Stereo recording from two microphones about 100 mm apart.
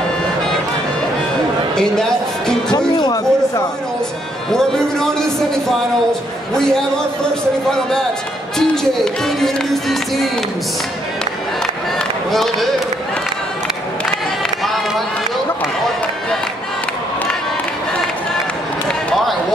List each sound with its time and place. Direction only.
1.8 s a sound: 5° left (ahead or behind)
2.7 s music: 40° left (ahead or behind)
4.5 s speech: 5° left (ahead or behind)
8.5 s speech: 5° left (ahead or behind)
12.3 s speech: centre (ahead or behind)
14.4 s run: centre (ahead or behind)